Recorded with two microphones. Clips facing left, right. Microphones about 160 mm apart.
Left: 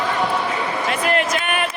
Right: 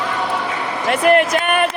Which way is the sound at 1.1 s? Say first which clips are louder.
Right 9 dB; 50° right (ahead or behind).